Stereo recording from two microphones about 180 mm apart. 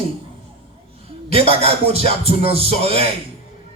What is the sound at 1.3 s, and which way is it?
Music, 30° right (ahead or behind).